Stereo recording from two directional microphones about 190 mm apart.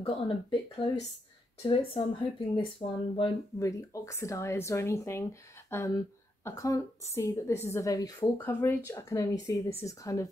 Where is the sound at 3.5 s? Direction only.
15° left (ahead or behind).